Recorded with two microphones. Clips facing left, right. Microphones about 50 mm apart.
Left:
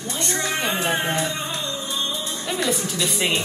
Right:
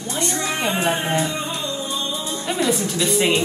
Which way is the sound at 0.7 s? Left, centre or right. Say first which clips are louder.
Right 2 dB; right.